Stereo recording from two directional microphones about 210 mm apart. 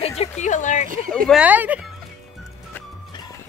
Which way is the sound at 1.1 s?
5° left (ahead or behind).